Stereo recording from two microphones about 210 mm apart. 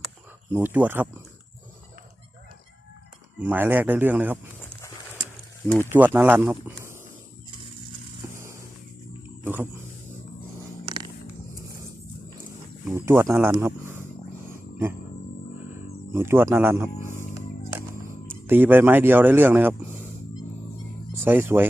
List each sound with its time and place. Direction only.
0.5 s speech: 10° right (ahead or behind)
3.3 s speech: 10° right (ahead or behind)
4.6 s a sound: 10° left (ahead or behind)
5.8 s speech: 10° right (ahead or behind)
8.2 s vehicle: 10° right (ahead or behind)
9.4 s roaring cats: 10° right (ahead or behind)
10.8 s vehicle: 20° right (ahead or behind)
12.9 s speech: 10° right (ahead or behind)
14.4 s a sound: 10° right (ahead or behind)
16.1 s speech: 10° right (ahead or behind)
18.4 s speech: 10° right (ahead or behind)
21.2 s speech: 10° right (ahead or behind)